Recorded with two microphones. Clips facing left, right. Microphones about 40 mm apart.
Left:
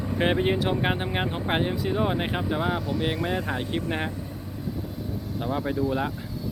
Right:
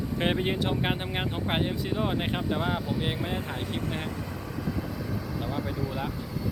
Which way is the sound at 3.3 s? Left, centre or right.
Left.